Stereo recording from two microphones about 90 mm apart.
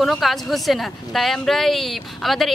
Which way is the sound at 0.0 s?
Centre (ahead or behind).